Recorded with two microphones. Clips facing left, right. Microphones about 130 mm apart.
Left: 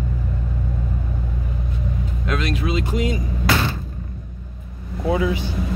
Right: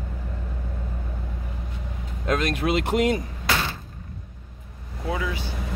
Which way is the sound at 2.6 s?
65° right (ahead or behind).